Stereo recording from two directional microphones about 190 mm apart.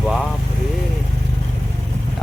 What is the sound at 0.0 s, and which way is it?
Vehicle, centre (ahead or behind).